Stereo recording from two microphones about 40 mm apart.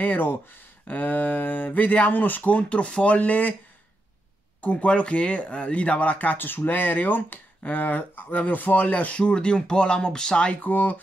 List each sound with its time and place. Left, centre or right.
0.0 s speech: left
4.6 s speech: left
7.6 s speech: left
9.1 s speech: left
10.5 s speech: left